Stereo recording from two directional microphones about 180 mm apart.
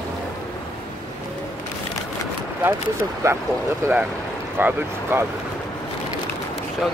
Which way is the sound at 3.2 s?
15° right (ahead or behind).